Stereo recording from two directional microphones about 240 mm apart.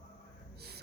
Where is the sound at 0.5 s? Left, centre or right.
Right.